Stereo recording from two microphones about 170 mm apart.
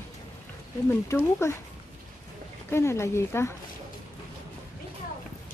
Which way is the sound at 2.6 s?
15° left (ahead or behind).